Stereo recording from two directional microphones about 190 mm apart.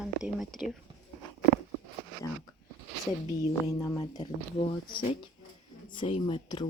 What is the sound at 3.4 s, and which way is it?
Speech, 15° left (ahead or behind).